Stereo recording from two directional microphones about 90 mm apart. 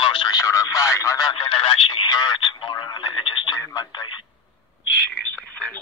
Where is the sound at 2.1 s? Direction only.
50° left (ahead or behind); by 3.5 s 65° left (ahead or behind).